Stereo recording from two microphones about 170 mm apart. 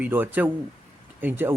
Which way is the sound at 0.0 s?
10° right (ahead or behind).